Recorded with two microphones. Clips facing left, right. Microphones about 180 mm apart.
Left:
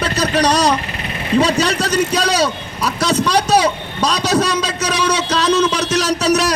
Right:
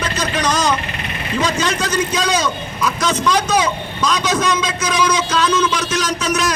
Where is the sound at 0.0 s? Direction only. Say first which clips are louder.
Left 4 dB; 35° left (ahead or behind).